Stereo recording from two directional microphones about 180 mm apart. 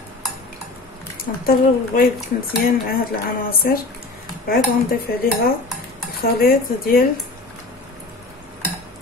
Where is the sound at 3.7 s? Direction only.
55° left (ahead or behind).